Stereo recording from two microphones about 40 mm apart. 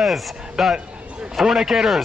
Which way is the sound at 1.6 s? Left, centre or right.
Centre.